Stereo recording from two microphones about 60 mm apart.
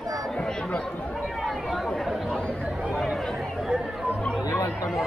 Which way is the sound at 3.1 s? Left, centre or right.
Centre.